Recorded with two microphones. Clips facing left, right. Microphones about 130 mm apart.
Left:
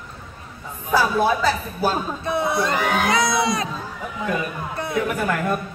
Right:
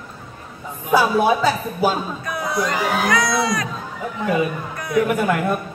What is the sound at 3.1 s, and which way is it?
Speech, 25° left (ahead or behind).